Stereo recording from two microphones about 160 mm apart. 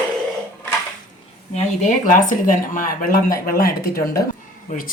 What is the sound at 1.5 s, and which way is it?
Speech, 50° left (ahead or behind).